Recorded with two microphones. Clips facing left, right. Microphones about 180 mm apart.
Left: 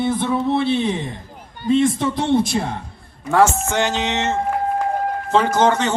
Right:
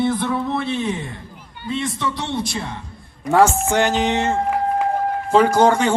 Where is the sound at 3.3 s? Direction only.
15° right (ahead or behind).